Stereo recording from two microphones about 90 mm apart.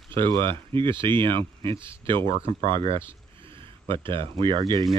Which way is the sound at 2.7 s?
85° right.